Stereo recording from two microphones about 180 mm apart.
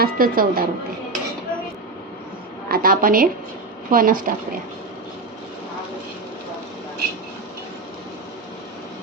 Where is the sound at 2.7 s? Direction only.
55° right (ahead or behind).